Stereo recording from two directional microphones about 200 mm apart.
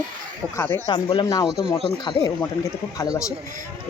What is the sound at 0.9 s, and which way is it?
Speech, 25° left (ahead or behind).